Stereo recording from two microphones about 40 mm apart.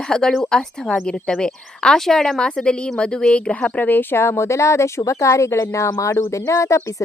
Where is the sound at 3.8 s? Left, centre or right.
Left.